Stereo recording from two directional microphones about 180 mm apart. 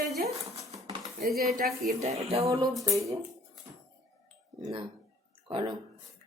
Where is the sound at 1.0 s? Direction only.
Centre (ahead or behind).